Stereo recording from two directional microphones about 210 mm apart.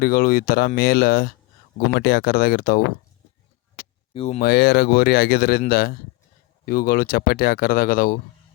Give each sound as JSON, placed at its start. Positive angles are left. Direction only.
{"t": 0.0, "sound": "speech", "side_deg": 45}
{"t": 4.1, "sound": "speech", "side_deg": 30}
{"t": 4.4, "sound": "speech", "side_deg": 50}